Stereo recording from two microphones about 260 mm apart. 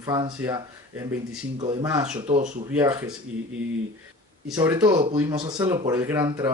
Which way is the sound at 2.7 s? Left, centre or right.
Centre.